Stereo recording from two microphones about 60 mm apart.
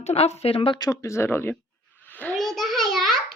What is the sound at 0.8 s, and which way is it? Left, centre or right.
Speech, left.